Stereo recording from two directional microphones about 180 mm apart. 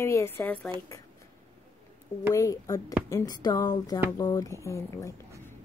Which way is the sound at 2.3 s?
15° left (ahead or behind).